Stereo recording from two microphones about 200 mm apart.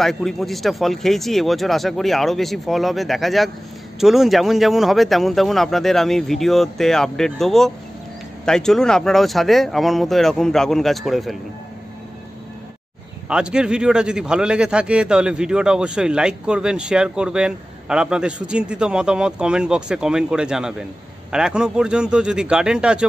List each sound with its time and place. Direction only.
0.0 s a man's voice: centre (ahead or behind)
13.3 s a man's voice: 5° right (ahead or behind)